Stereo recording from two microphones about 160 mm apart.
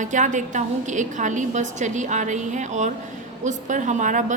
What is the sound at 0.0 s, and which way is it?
A woman's voice, 50° right (ahead or behind).